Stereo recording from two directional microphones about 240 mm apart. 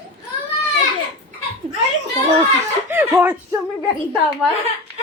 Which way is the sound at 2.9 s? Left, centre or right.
Centre.